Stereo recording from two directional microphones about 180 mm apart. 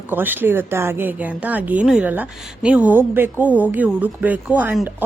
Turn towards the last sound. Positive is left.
turn(degrees=-10)  # may be behind; listen again after turning